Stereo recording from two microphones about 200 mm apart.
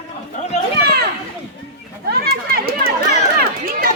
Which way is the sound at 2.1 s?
50° right (ahead or behind).